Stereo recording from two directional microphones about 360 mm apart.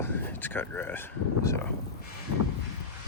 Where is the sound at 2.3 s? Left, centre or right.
Left.